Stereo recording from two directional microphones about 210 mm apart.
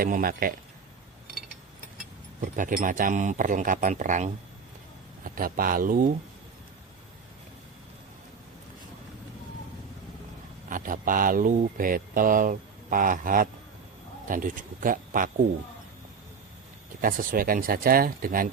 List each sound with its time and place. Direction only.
0.0 s speech: 45° right (ahead or behind)
2.4 s speech: 40° right (ahead or behind)
10.7 s speech: 40° right (ahead or behind)
17.0 s speech: 40° right (ahead or behind)